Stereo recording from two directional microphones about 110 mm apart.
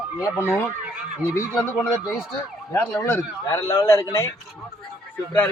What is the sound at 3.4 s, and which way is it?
Speech, 30° left (ahead or behind).